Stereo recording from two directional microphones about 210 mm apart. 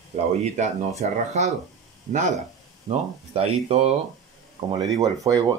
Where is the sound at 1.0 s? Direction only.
30° right (ahead or behind).